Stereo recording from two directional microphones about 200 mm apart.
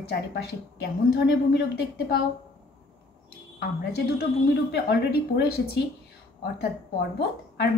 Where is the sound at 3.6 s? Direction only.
50° left (ahead or behind).